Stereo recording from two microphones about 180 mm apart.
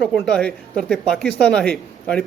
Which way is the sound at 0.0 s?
Centre (ahead or behind).